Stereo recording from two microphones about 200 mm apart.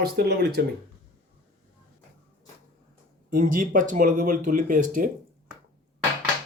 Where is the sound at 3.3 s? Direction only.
40° right (ahead or behind).